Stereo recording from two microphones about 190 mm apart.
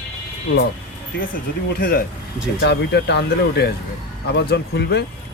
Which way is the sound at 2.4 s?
60° left (ahead or behind).